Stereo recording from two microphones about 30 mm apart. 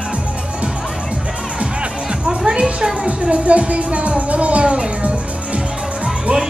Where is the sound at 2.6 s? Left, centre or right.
Centre.